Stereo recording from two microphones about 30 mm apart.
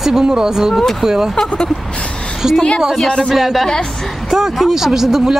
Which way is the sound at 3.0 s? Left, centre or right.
Left.